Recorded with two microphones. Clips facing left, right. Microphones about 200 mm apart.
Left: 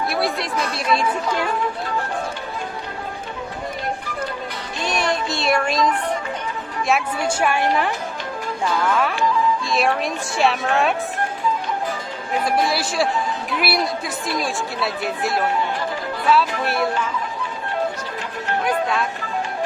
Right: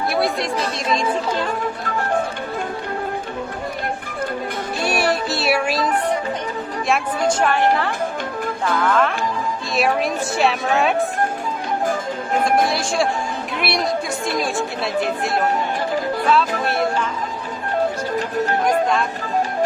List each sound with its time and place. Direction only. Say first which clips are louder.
0.1 s chatter: right 2 dB; centre (ahead or behind)
0.5 s a woman's voice: even; 30° right (ahead or behind)
4.8 s music: right 2 dB; 10° right (ahead or behind)
7.3 s a woman's voice: right 3 dB; 10° left (ahead or behind)
11.9 s music: right 4 dB; 45° right (ahead or behind)
12.6 s a woman's voice: right 1 dB; centre (ahead or behind)
18.6 s speech: right 1 dB; 5° left (ahead or behind)